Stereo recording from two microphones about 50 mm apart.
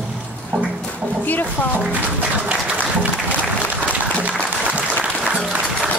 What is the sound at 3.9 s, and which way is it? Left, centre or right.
Applause, right.